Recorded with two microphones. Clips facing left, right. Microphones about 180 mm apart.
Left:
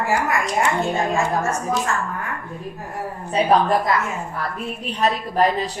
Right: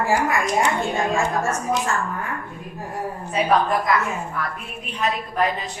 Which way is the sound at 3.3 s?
30° left (ahead or behind).